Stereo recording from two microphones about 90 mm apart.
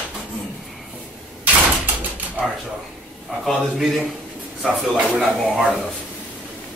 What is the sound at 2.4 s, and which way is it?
Speech, 15° right (ahead or behind).